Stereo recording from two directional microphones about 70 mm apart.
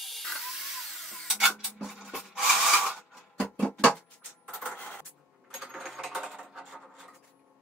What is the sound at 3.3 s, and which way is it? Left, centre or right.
Music, left.